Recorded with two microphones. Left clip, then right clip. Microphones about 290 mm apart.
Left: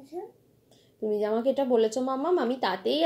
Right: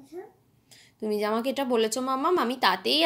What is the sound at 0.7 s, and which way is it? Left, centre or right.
Speech, right.